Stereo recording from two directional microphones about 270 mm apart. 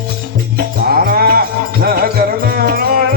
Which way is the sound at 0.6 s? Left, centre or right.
Right.